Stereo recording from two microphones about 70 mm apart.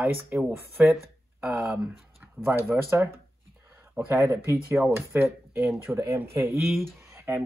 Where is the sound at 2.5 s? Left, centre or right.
Right.